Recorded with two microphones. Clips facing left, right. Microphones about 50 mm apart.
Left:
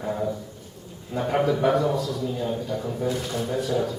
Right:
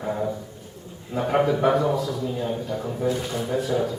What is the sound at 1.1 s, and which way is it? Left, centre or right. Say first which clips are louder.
A man's voice: right 2 dB; centre.